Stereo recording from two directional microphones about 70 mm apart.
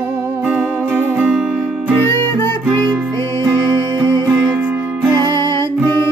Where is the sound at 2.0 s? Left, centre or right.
Left.